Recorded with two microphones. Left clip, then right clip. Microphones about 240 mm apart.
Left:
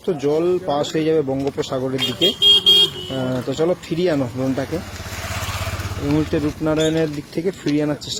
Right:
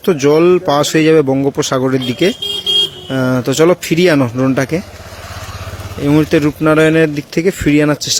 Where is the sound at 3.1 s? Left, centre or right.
Right.